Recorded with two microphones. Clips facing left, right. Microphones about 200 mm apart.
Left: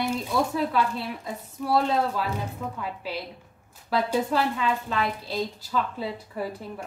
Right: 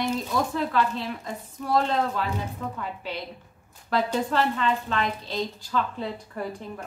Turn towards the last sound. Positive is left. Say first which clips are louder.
# left 1 dB
turn(degrees=5)  # may be behind; listen again after turning